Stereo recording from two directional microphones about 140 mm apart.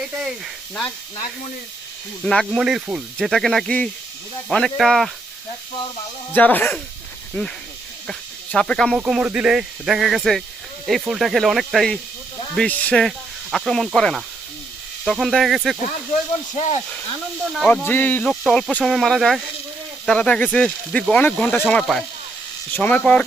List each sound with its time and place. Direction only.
0.1 s speech: 5° right (ahead or behind)
2.2 s speech: 5° left (ahead or behind)
6.3 s speech: 15° left (ahead or behind)
8.5 s speech: 5° left (ahead or behind)
9.0 s speech: 5° right (ahead or behind)
12.5 s speech: 10° left (ahead or behind)
16.6 s speech: 50° left (ahead or behind)
17.5 s speech: centre (ahead or behind)
17.8 s speech: 15° left (ahead or behind)